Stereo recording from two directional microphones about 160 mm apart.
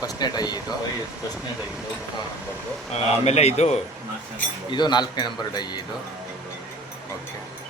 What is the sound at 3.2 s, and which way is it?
Speech, 40° left (ahead or behind).